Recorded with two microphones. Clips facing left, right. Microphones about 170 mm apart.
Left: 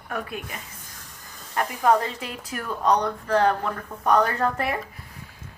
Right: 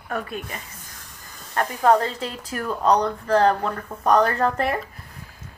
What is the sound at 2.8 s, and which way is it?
Speech, 30° right (ahead or behind).